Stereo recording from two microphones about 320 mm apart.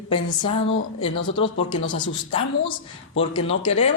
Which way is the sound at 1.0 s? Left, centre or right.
Centre.